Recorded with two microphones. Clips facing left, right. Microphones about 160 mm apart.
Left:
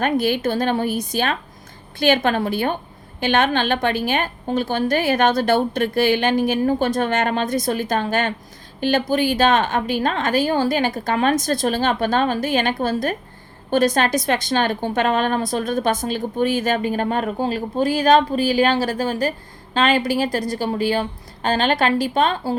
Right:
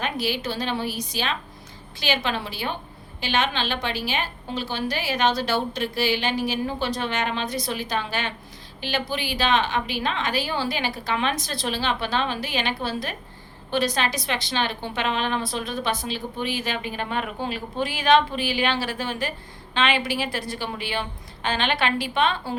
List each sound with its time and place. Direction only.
0.0 s a woman's voice: 50° left (ahead or behind)